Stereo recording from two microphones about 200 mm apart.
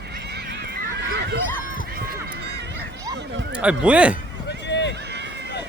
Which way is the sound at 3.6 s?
5° right (ahead or behind).